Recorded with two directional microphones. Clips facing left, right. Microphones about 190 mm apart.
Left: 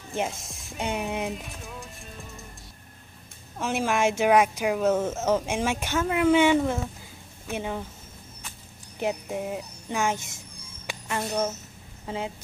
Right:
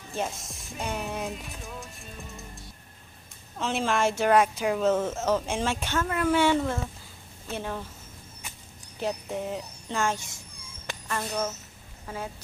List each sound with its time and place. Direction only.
0.7 s music: 20° left (ahead or behind)
1.3 s music: centre (ahead or behind)
3.5 s speech: 10° left (ahead or behind)
9.0 s a woman's voice: 10° left (ahead or behind)
12.1 s music: 25° left (ahead or behind)